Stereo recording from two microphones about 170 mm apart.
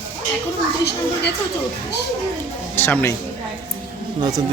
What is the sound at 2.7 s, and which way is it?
Speech, 15° left (ahead or behind).